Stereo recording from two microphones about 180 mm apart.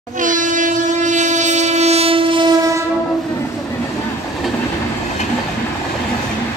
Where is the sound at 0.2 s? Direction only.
45° right (ahead or behind); by 2.5 s 30° right (ahead or behind).